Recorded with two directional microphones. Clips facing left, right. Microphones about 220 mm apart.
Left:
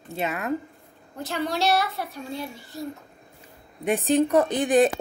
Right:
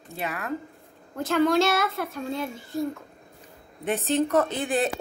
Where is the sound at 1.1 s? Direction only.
50° right (ahead or behind).